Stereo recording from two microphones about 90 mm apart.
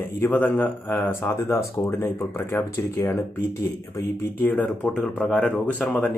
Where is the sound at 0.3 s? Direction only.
15° left (ahead or behind).